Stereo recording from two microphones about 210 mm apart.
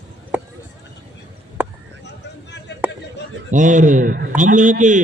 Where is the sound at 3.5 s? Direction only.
35° right (ahead or behind).